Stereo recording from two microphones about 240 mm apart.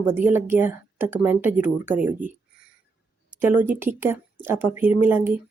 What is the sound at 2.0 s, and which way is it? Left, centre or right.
Speech, right.